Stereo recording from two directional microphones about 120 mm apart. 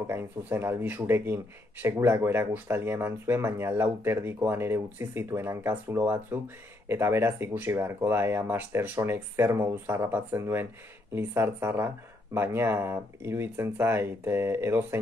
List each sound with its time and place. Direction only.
0.0 s speech: 20° right (ahead or behind)